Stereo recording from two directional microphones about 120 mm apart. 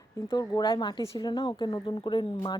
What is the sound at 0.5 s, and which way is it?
A woman's voice, 40° left (ahead or behind).